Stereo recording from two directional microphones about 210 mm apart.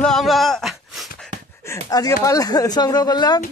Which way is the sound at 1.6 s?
15° left (ahead or behind).